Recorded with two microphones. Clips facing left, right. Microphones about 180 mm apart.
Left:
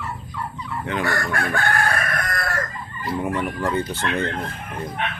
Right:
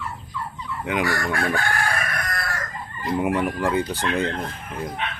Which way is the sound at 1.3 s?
55° left (ahead or behind).